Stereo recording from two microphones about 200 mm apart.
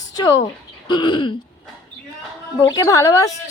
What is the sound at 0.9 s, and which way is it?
Throat clearing, 25° left (ahead or behind).